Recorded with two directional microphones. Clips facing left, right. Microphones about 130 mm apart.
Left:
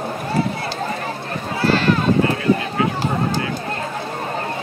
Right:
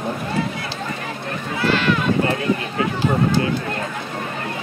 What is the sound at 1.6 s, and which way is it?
Run, 35° left (ahead or behind).